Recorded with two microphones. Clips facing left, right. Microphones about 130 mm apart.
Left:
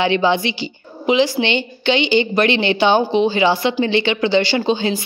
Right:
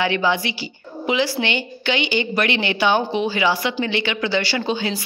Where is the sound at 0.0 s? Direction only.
25° left (ahead or behind).